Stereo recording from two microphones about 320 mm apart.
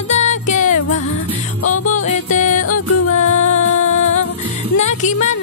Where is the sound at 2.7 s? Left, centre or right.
Left.